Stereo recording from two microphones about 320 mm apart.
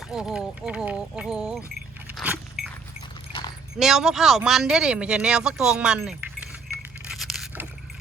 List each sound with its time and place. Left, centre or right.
0.1 s speech: centre
2.0 s vehicle: centre
2.6 s keys jangling: centre
3.8 s speech: centre
7.0 s a sound: centre